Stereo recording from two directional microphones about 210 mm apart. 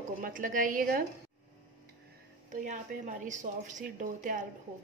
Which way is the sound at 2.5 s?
35° right (ahead or behind).